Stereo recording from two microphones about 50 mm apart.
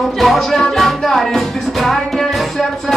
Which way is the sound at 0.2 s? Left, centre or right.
Centre.